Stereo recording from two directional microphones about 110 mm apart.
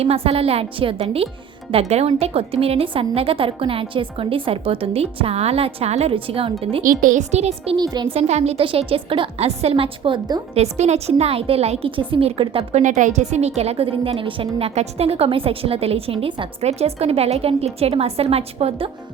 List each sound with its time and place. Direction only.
0.0 s a woman's voice: 65° right (ahead or behind)
1.7 s a woman's voice: 70° right (ahead or behind)
7.8 s speech: 40° right (ahead or behind)
8.1 s a woman's voice: 80° right
8.6 s a woman's voice: 55° right (ahead or behind)
10.5 s a woman's voice: 80° right; by 11.9 s 65° right (ahead or behind)
11.9 s a woman's voice: 50° right (ahead or behind)
14.8 s a woman's voice: 65° right (ahead or behind)